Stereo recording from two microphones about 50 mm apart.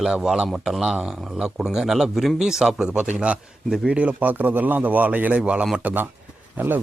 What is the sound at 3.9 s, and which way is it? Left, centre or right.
A man's voice, right.